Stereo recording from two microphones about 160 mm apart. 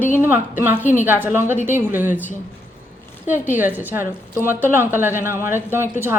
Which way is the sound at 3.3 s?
10° right (ahead or behind).